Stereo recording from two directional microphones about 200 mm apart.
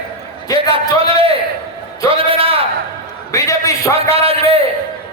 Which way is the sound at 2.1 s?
25° right (ahead or behind).